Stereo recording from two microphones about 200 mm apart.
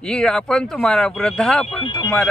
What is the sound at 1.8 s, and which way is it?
Speech, 20° left (ahead or behind).